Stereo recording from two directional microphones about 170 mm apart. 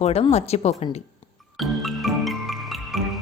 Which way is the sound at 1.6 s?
Centre (ahead or behind).